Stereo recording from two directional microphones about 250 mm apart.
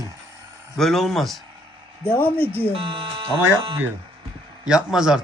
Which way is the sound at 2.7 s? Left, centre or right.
Right.